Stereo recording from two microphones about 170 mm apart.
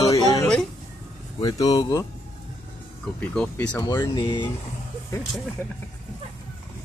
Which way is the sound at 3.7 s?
20° left (ahead or behind).